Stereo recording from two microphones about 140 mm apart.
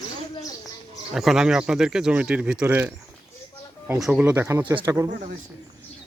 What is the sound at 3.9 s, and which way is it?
Speech, 5° right (ahead or behind).